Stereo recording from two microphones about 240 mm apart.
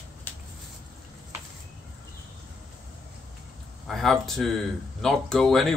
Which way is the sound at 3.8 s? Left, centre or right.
Centre.